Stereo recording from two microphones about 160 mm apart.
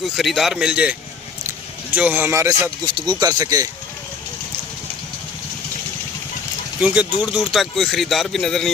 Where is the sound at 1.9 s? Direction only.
10° right (ahead or behind).